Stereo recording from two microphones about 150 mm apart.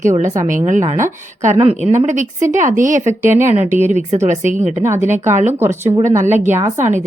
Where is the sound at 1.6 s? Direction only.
40° right (ahead or behind).